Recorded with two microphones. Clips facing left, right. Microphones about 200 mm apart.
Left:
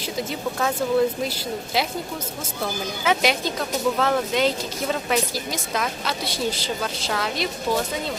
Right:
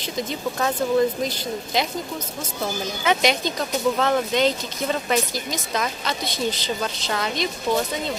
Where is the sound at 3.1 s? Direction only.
5° left (ahead or behind).